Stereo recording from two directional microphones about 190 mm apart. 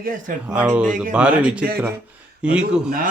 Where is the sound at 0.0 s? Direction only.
45° right (ahead or behind).